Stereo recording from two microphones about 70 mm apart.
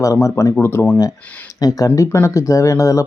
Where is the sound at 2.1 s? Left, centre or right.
Left.